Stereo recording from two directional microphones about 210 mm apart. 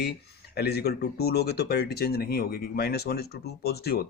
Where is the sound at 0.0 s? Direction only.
50° left (ahead or behind).